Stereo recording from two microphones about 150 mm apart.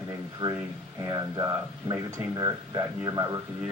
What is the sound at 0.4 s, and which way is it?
Speech, 25° right (ahead or behind).